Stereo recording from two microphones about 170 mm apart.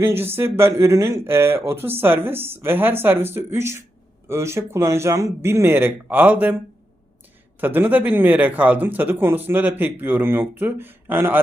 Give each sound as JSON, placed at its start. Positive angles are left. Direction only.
{"t": 0.0, "sound": "speech", "side_deg": -15}
{"t": 7.6, "sound": "speech", "side_deg": -10}